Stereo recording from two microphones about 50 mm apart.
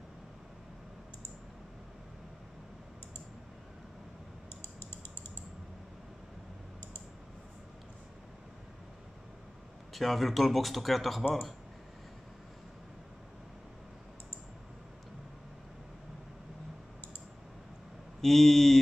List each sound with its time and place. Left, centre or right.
4.6 s typing: left
9.9 s speech: centre
18.2 s speech: centre